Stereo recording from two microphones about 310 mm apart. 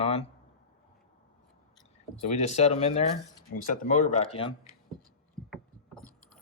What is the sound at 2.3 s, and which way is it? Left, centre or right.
Speech, left.